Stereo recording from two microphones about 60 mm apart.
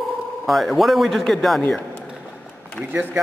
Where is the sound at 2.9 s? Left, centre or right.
Right.